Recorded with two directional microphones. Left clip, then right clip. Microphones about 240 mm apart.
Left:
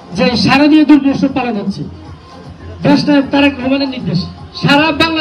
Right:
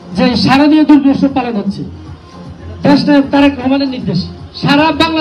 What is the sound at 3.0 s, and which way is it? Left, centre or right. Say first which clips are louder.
A man's voice: right 2 dB; right.